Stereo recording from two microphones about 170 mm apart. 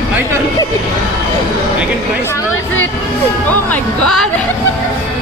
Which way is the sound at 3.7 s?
5° left (ahead or behind).